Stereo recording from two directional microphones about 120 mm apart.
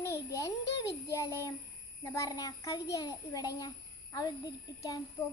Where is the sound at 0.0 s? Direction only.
25° left (ahead or behind).